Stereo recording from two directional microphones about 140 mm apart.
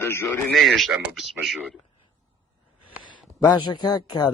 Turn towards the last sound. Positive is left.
turn(degrees=30)  # may be behind; listen again after turning